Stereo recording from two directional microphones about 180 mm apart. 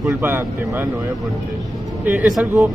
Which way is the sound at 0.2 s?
10° right (ahead or behind).